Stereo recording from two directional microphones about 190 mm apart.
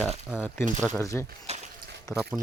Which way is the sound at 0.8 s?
15° left (ahead or behind).